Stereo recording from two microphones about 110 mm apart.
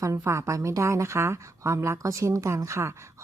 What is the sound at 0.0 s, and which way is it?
Speech, 25° right (ahead or behind).